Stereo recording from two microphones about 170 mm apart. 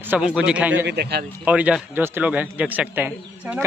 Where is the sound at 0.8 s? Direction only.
70° right (ahead or behind).